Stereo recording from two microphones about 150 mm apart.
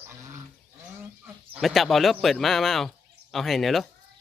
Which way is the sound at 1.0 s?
10° right (ahead or behind).